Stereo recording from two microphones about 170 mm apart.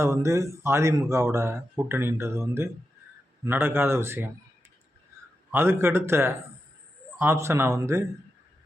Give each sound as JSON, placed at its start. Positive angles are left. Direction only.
{"t": 0.0, "sound": "speech", "side_deg": -15}
{"t": 5.1, "sound": "a sound", "side_deg": -15}
{"t": 5.5, "sound": "speech", "side_deg": -15}